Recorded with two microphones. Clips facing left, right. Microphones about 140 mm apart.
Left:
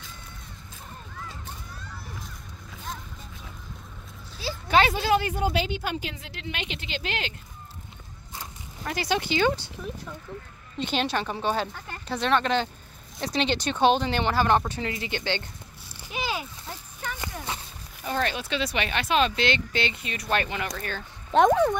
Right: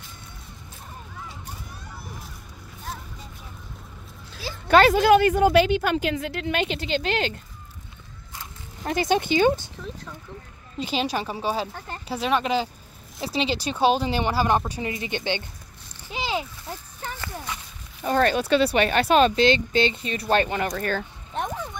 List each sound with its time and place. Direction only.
1.1 s a sound: 10° right (ahead or behind)
4.6 s a woman's voice: 50° right (ahead or behind)
8.8 s speech: 20° right (ahead or behind)
10.8 s a woman's voice: 5° right (ahead or behind)
16.1 s a sound: 25° right (ahead or behind)
17.5 s walk: 30° left (ahead or behind)
18.0 s speech: 45° right (ahead or behind)
21.3 s speech: 90° left